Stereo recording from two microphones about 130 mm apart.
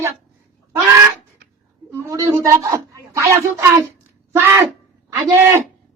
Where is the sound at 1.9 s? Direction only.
25° right (ahead or behind).